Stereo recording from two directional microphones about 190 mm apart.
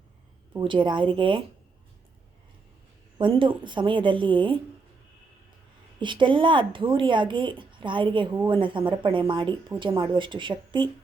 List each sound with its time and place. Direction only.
0.6 s speech: 25° right (ahead or behind)
3.2 s speech: 25° right (ahead or behind)
6.0 s speech: 25° right (ahead or behind)